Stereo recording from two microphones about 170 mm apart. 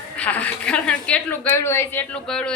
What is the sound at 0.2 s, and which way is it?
A woman's voice, 10° left (ahead or behind).